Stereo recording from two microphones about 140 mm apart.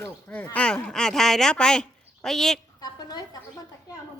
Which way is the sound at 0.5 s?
10° left (ahead or behind).